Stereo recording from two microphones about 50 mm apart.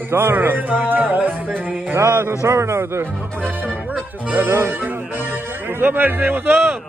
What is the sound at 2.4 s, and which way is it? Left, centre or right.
Speech, right.